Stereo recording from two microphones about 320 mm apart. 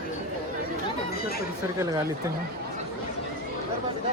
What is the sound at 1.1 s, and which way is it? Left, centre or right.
Chatter, left.